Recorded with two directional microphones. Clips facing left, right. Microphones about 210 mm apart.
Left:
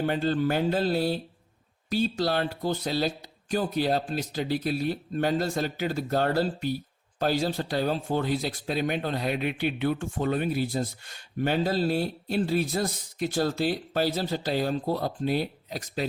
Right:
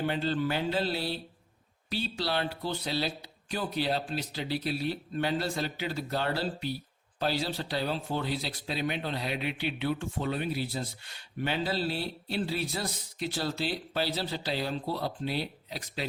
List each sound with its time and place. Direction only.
0.0 s speech: 45° left (ahead or behind)